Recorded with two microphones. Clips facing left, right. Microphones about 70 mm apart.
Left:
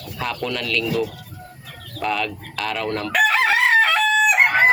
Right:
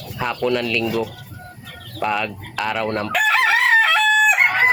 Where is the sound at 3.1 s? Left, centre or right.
Centre.